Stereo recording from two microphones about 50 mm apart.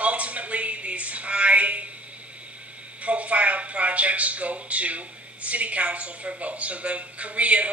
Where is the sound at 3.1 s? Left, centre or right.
Right.